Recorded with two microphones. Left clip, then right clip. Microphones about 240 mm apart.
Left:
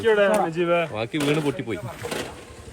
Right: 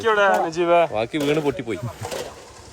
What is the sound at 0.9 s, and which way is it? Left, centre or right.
Speech, centre.